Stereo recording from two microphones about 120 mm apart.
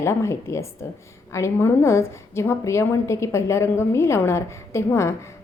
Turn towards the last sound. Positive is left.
turn(degrees=25)  # may be behind; listen again after turning